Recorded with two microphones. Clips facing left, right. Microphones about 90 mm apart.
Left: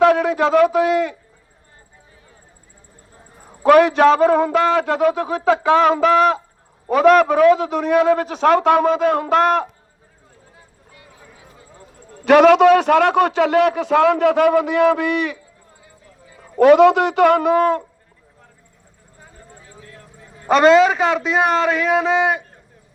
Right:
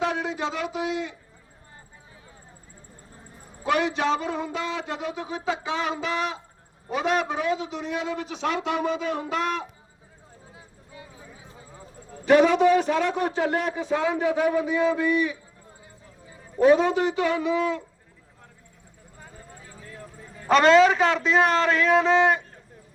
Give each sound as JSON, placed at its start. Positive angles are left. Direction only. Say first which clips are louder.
{"t": 0.0, "sound": "a man's voice", "louder": "left 12 dB", "side_deg": 60}
{"t": 3.6, "sound": "a man's voice", "louder": "left 13 dB", "side_deg": 55}
{"t": 12.2, "sound": "a man's voice", "louder": "left 7 dB", "side_deg": 75}
{"t": 16.4, "sound": "a man's voice", "louder": "left 8 dB", "side_deg": 75}
{"t": 20.5, "sound": "a man's voice", "louder": "left 4 dB", "side_deg": 5}